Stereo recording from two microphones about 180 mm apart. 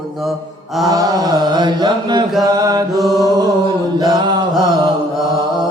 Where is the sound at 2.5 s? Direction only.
20° right (ahead or behind).